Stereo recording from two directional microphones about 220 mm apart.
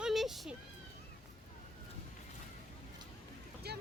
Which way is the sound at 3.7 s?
45° right (ahead or behind).